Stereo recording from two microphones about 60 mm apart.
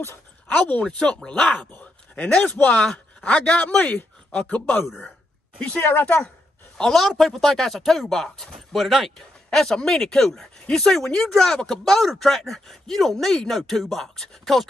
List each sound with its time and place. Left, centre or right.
0.5 s a man's voice: left
3.5 s speech: left
5.8 s a woman's voice: left
6.0 s speech: left
6.8 s speech: centre